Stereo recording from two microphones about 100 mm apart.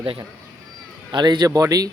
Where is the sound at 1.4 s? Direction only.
35° right (ahead or behind).